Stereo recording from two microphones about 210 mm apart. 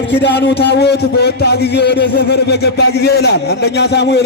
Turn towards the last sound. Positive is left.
turn(degrees=50)  # may be behind; listen again after turning